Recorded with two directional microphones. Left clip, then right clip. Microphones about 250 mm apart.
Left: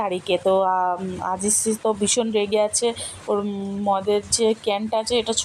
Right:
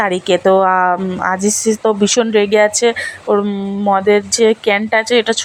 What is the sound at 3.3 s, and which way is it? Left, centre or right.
Speech, right.